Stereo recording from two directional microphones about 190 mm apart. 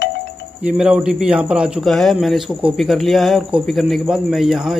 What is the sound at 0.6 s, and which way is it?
Speech, 5° right (ahead or behind).